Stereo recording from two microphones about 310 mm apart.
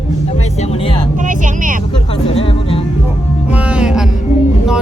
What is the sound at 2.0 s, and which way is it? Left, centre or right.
Music, centre.